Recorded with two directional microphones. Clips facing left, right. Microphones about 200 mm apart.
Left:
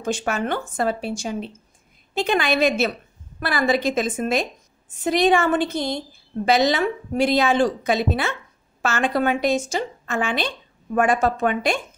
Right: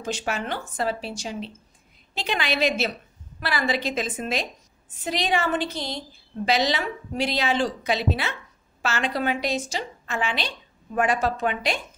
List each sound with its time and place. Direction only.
0.0 s a woman's voice: 50° left (ahead or behind)